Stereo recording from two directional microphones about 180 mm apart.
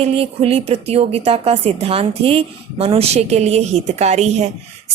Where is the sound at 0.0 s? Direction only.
30° right (ahead or behind).